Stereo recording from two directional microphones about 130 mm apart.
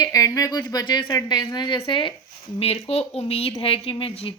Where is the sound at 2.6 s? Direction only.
50° left (ahead or behind).